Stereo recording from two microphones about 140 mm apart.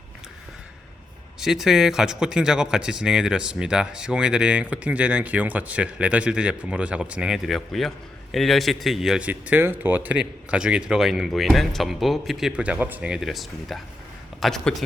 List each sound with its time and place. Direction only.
1.4 s a man's voice: centre (ahead or behind)